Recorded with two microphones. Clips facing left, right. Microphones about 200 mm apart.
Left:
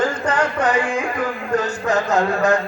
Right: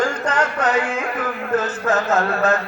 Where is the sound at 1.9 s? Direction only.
15° left (ahead or behind).